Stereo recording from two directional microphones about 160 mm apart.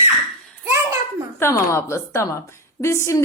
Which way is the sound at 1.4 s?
20° left (ahead or behind).